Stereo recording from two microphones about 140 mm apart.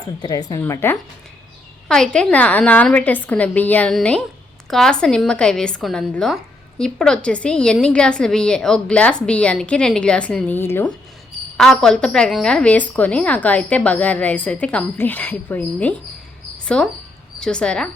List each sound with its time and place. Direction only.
0.2 s a woman's voice: 30° left (ahead or behind)
0.6 s a woman's voice: 15° left (ahead or behind)
1.9 s a woman's voice: 5° left (ahead or behind)
11.5 s a woman's voice: 5° left (ahead or behind)